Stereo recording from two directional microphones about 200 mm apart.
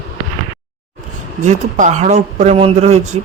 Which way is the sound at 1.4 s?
35° right (ahead or behind).